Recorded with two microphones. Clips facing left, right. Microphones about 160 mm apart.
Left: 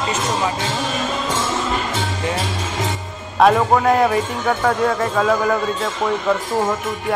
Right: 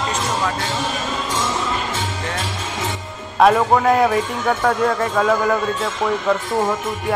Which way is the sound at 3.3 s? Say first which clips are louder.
Even; centre (ahead or behind).